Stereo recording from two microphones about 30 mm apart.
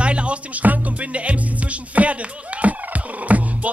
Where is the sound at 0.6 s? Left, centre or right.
Right.